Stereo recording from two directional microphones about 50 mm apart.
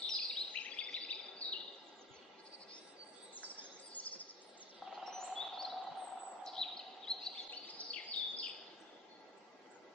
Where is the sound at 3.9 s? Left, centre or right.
Left.